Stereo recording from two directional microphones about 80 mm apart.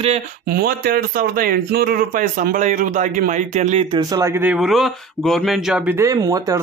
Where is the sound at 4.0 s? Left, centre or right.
Right.